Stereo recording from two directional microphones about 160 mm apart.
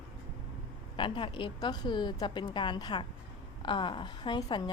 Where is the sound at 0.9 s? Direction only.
30° left (ahead or behind).